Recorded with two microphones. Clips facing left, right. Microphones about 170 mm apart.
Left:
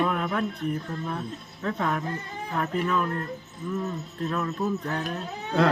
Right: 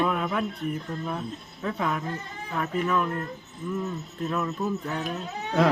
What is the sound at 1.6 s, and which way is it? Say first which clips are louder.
Speech: left 1 dB; 5° right (ahead or behind).